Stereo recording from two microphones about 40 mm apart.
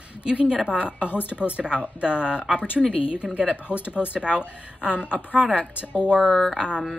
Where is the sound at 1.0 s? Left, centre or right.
Left.